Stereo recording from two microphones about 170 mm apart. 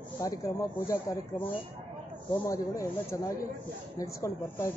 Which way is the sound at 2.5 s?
20° left (ahead or behind).